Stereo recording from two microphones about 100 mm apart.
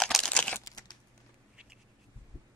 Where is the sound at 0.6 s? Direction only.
40° left (ahead or behind).